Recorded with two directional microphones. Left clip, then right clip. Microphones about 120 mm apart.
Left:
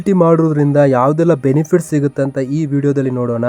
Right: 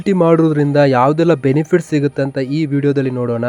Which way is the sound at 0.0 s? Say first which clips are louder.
Even; 25° right (ahead or behind).